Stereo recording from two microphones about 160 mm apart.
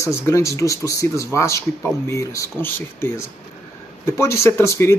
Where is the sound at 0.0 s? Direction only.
20° left (ahead or behind).